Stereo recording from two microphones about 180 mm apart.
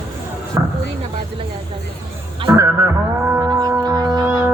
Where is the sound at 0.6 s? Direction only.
20° right (ahead or behind).